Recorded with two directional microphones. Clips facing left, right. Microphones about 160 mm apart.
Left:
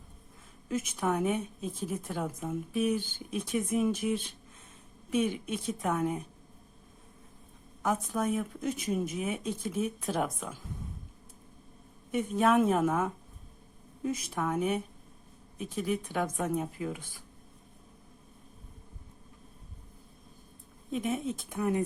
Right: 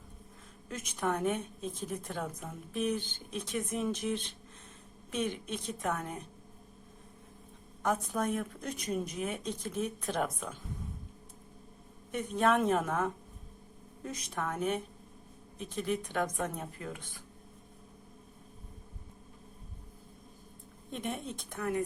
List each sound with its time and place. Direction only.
0.7 s a woman's voice: 5° left (ahead or behind)
7.8 s speech: centre (ahead or behind)
12.1 s a woman's voice: 5° left (ahead or behind)
20.9 s speech: centre (ahead or behind)
21.6 s speech: 20° left (ahead or behind)